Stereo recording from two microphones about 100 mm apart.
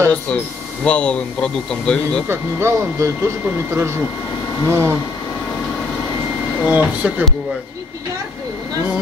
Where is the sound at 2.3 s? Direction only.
30° right (ahead or behind).